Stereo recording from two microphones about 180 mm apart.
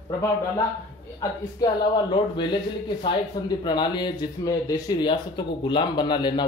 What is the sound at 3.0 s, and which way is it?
Speech, 25° left (ahead or behind).